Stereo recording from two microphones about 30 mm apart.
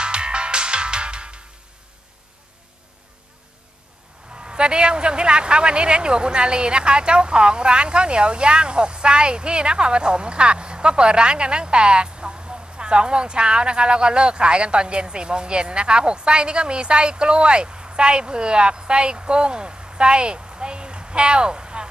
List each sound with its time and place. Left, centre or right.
0.0 s music: right
4.5 s a man's voice: right